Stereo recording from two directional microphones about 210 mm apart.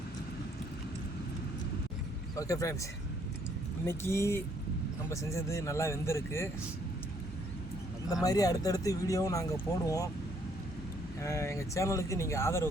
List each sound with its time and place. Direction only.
2.4 s speech: 15° left (ahead or behind)
3.8 s speech: 10° left (ahead or behind)
8.1 s speech: 15° left (ahead or behind)
11.2 s speech: 15° left (ahead or behind)